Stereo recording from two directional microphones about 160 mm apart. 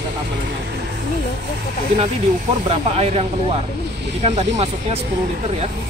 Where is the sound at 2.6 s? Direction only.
40° right (ahead or behind).